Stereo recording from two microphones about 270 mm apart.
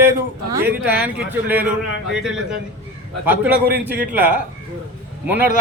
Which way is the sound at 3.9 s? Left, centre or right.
Right.